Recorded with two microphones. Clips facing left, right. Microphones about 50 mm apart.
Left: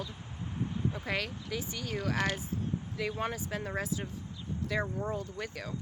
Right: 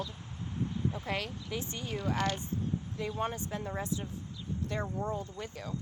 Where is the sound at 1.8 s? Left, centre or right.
Left.